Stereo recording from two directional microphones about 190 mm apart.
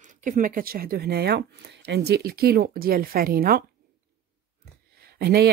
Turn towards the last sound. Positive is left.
turn(degrees=-55)  # may be behind; listen again after turning